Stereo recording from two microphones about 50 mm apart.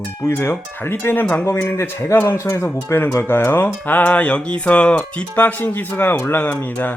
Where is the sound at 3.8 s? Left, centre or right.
Left.